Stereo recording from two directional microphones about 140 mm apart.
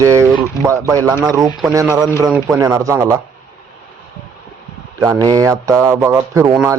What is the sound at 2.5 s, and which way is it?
Speech, 25° right (ahead or behind).